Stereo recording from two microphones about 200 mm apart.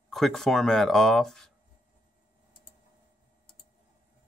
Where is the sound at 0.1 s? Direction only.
Centre (ahead or behind).